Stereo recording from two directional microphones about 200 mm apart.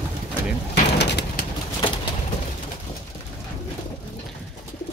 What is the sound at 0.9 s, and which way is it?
Bird, 55° left (ahead or behind).